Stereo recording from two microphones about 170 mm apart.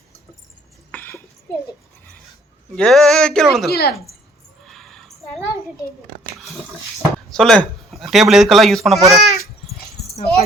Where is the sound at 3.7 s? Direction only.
65° left (ahead or behind).